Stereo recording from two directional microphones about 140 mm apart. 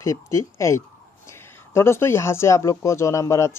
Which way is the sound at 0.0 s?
20° left (ahead or behind).